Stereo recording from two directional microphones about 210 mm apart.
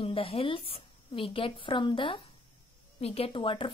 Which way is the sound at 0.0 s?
25° left (ahead or behind).